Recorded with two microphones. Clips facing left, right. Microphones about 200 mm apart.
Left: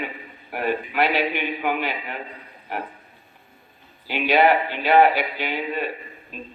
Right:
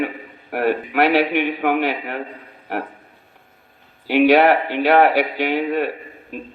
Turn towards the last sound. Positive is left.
turn(degrees=-70)  # may be behind; listen again after turning